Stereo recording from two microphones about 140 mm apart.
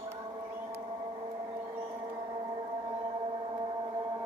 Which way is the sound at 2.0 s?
30° right (ahead or behind).